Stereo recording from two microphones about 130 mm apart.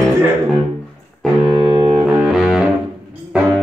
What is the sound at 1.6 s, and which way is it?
Music, 35° right (ahead or behind).